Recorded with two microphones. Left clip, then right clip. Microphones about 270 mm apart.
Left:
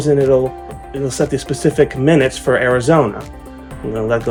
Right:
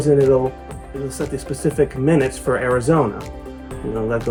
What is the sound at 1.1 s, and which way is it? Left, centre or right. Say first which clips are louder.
Speech: left 9 dB; centre.